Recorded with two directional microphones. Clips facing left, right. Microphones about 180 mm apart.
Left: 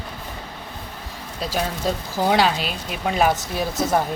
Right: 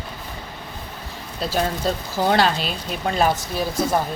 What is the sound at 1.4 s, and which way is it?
Speech, 10° left (ahead or behind).